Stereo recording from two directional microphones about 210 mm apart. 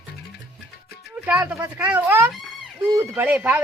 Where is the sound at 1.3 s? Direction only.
10° right (ahead or behind).